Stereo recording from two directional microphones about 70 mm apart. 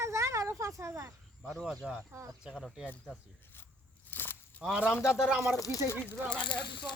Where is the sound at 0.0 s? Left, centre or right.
Right.